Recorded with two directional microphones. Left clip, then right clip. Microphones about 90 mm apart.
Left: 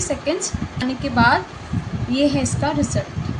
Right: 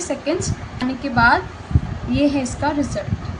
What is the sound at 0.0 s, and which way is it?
A woman's voice, 20° right (ahead or behind).